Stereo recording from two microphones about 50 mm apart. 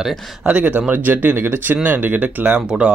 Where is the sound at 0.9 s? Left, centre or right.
Right.